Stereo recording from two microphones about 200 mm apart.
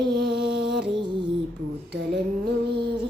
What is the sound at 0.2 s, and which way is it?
Music, 55° right (ahead or behind).